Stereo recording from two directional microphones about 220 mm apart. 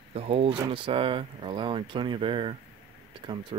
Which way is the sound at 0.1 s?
25° right (ahead or behind).